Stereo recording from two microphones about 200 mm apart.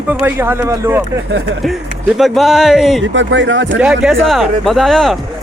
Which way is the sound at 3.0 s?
65° right (ahead or behind).